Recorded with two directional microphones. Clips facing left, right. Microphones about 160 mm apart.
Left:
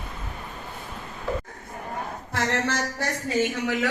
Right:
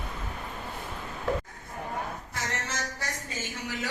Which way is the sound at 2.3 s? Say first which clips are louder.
Left 12 dB; 70° left (ahead or behind).